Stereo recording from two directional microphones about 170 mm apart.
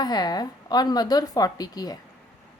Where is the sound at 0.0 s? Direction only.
25° left (ahead or behind).